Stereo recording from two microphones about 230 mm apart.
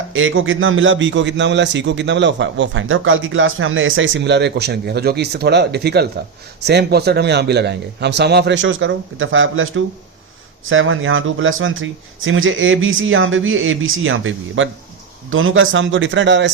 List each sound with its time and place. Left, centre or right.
0.1 s a man's voice: right